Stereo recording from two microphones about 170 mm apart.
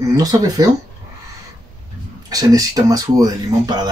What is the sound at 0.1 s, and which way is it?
Speech, 20° right (ahead or behind).